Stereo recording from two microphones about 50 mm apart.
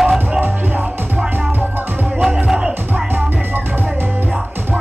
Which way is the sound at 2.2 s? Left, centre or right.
Centre.